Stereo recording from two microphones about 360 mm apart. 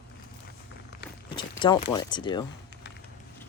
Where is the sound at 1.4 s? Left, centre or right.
Centre.